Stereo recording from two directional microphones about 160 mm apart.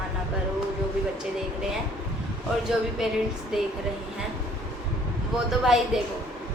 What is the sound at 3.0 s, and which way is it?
Speech, 5° right (ahead or behind).